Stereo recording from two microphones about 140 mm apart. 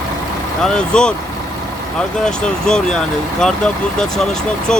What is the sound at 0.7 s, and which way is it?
Speech, 5° left (ahead or behind).